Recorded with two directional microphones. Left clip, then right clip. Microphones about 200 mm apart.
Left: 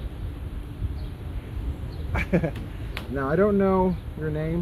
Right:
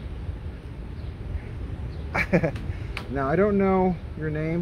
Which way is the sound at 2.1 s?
20° right (ahead or behind).